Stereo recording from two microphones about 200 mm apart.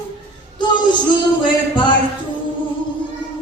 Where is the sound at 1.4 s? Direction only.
25° left (ahead or behind).